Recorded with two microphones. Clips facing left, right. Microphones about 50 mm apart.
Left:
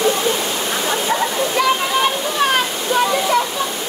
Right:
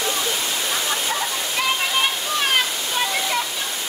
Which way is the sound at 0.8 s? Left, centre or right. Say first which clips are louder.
Left 6 dB; left.